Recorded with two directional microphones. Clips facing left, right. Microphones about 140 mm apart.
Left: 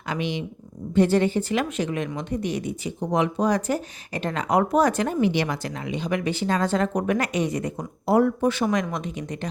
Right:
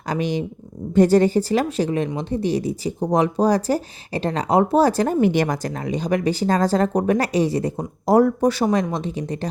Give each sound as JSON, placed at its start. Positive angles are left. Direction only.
{"t": 0.1, "sound": "speech", "side_deg": -40}